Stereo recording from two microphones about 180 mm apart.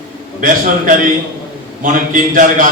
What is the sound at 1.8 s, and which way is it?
Speech, 50° right (ahead or behind).